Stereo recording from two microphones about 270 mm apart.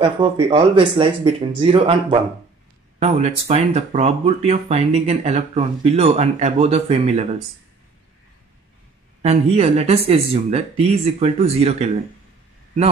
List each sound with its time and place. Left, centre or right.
0.0 s speech: centre
9.2 s speech: right